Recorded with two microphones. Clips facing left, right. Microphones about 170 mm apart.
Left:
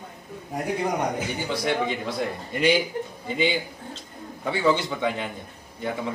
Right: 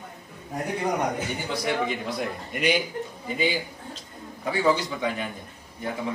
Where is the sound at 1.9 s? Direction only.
30° left (ahead or behind).